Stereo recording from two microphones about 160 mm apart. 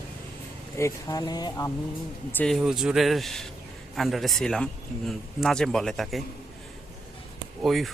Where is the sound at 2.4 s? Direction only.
Centre (ahead or behind).